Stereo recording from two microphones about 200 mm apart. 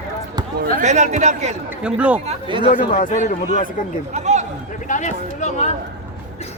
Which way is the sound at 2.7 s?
40° left (ahead or behind).